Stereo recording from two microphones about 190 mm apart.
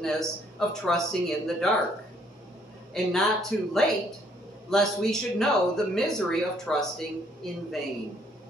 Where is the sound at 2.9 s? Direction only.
Centre (ahead or behind).